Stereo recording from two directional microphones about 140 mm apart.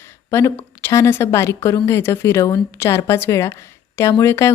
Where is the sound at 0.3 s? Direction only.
20° left (ahead or behind).